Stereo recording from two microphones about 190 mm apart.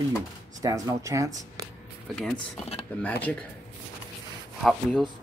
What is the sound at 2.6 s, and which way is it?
Speech, 30° left (ahead or behind).